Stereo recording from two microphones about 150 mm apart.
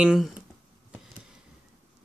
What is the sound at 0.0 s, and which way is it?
Speech, 5° right (ahead or behind).